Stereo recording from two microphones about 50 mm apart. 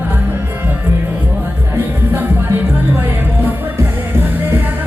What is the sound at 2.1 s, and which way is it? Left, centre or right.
Music, right.